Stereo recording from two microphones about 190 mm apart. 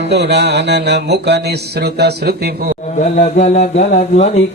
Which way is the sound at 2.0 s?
60° right (ahead or behind).